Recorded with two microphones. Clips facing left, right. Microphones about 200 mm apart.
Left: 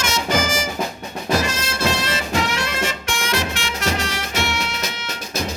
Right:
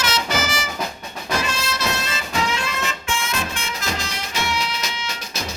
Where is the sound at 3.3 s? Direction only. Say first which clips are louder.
Left 4 dB; 80° left.